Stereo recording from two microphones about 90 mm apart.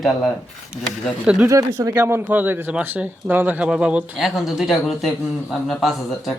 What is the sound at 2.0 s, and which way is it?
A man's voice, 25° right (ahead or behind).